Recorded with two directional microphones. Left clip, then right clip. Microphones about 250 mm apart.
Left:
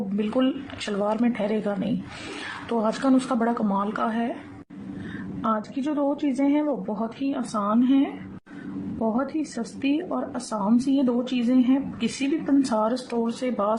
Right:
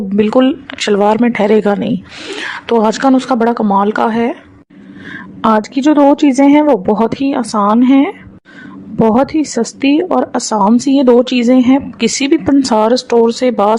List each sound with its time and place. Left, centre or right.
0.2 s a woman's voice: right
5.4 s a woman's voice: right